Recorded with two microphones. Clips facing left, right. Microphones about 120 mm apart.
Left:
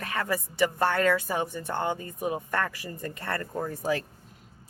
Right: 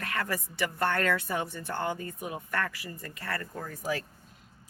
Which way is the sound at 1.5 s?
15° left (ahead or behind).